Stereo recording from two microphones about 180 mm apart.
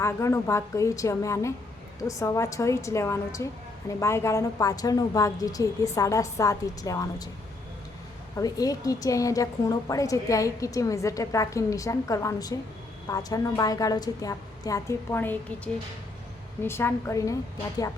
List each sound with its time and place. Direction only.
0.0 s a woman's voice: 15° left (ahead or behind)
8.4 s a woman's voice: 20° left (ahead or behind)